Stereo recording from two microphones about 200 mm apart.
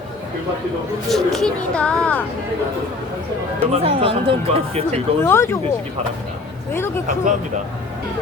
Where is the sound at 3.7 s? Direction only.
30° right (ahead or behind).